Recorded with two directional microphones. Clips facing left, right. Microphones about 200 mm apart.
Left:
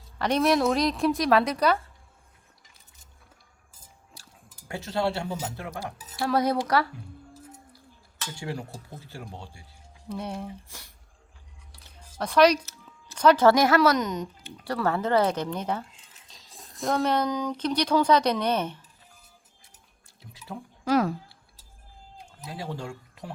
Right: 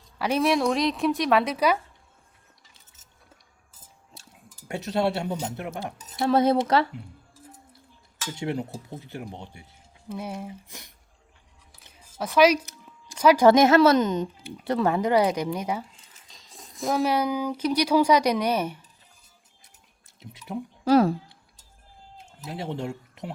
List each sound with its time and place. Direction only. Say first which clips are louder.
0.2 s speech: even; 5° right (ahead or behind)
4.1 s a sound: right 3 dB; 20° right (ahead or behind)
4.7 s speech: right 3 dB; 20° right (ahead or behind)
8.4 s speech: right 6 dB; 20° right (ahead or behind)
10.1 s speech: even; 5° right (ahead or behind)
10.7 s speech: right 3 dB; 20° right (ahead or behind)
11.9 s a sound: even; 5° right (ahead or behind)
12.6 s speech: right 2 dB; 10° right (ahead or behind)
20.5 s speech: right 6 dB; 20° right (ahead or behind)
20.8 s speech: right 5 dB; 30° right (ahead or behind)
22.4 s speech: right 4 dB; 25° right (ahead or behind)